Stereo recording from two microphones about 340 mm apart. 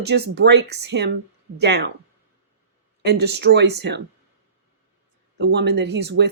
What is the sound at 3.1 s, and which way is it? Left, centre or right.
Speech, right.